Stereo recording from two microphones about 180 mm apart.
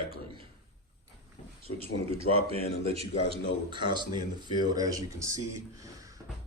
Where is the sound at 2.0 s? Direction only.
30° right (ahead or behind).